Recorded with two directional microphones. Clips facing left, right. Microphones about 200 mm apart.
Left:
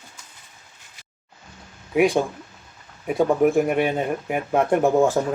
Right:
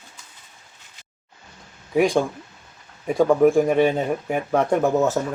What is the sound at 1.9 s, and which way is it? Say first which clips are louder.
Speech: even; 5° left (ahead or behind).